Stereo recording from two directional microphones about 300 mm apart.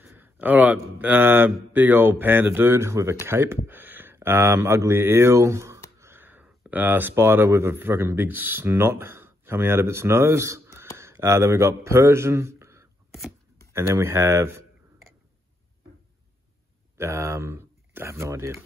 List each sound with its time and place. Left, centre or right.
0.0 s speech: centre
11.0 s a sound: centre
13.7 s speech: centre
16.9 s speech: centre